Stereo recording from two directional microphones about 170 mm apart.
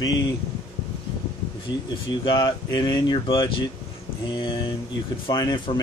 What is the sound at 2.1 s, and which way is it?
Speech, 25° left (ahead or behind).